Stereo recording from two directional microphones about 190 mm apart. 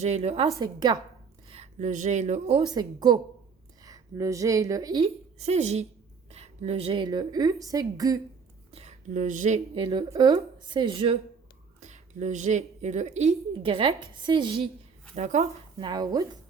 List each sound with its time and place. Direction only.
0.0 s a woman's voice: 35° right (ahead or behind)
1.5 s a woman's voice: 35° right (ahead or behind); by 5.0 s 20° right (ahead or behind)
5.0 s a woman's voice: 35° right (ahead or behind); by 8.2 s 20° right (ahead or behind)
8.7 s speech: 35° right (ahead or behind)
9.7 s a woman's voice: 30° right (ahead or behind)
11.8 s speech: 40° right (ahead or behind)
15.1 s speech: 40° right (ahead or behind)
15.8 s a woman's voice: 20° right (ahead or behind)